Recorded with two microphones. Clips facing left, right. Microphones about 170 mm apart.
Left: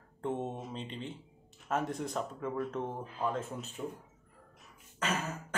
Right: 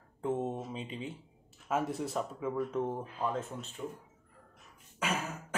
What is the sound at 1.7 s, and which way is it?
Speech, 5° right (ahead or behind).